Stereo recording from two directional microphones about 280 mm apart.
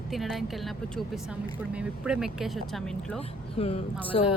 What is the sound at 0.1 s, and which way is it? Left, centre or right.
Speech, centre.